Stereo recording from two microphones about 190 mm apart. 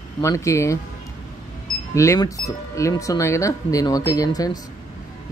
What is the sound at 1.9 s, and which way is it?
Speech, 15° left (ahead or behind).